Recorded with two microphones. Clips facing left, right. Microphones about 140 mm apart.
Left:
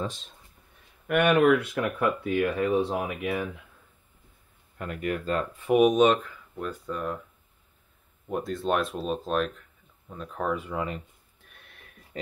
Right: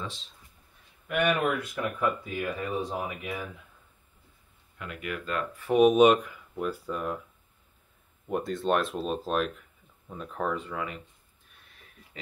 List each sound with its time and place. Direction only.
0.0 s speech: 50° left (ahead or behind)
1.0 s speech: 60° left (ahead or behind)
4.7 s speech: 45° left (ahead or behind)
5.6 s speech: 15° left (ahead or behind)
5.9 s speech: 10° right (ahead or behind)
8.3 s speech: centre (ahead or behind)
10.3 s speech: 5° left (ahead or behind)
11.4 s a sound: 70° left (ahead or behind)